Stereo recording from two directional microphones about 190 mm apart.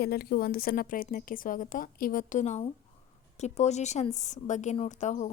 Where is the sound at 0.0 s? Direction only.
55° left (ahead or behind).